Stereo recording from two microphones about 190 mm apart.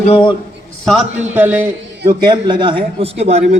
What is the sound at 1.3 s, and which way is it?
Speech, 10° right (ahead or behind).